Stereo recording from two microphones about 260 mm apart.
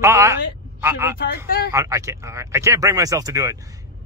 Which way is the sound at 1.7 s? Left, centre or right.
Centre.